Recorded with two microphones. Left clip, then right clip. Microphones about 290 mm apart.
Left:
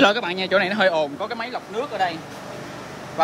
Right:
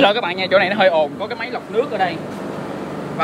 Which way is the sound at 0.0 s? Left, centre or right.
Left.